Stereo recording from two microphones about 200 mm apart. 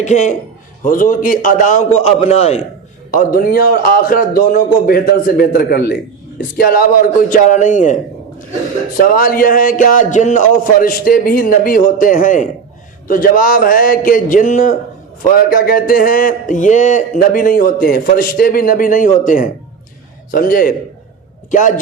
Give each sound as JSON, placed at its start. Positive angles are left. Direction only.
{"t": 0.0, "sound": "a man's voice", "side_deg": 35}
{"t": 3.1, "sound": "a man's voice", "side_deg": 45}
{"t": 9.1, "sound": "speech", "side_deg": 45}